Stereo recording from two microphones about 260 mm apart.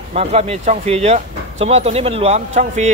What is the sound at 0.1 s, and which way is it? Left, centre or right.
Speech, right.